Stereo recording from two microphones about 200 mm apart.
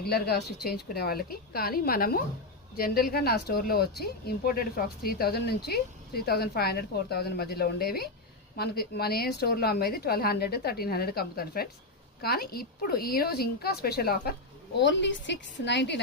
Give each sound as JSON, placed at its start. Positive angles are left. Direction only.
{"t": 0.0, "sound": "a woman's voice", "side_deg": 50}
{"t": 14.8, "sound": "a woman's voice", "side_deg": 60}